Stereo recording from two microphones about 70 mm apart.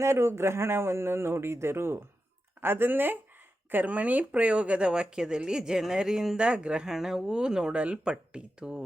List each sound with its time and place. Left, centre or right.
0.0 s a man's voice: right; by 8.8 s centre